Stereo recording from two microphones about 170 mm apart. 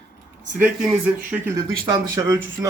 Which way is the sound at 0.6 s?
10° right (ahead or behind).